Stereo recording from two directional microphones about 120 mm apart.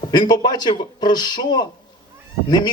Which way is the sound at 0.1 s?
35° left (ahead or behind).